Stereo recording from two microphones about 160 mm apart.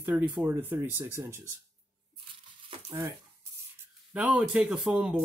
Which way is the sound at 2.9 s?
15° right (ahead or behind).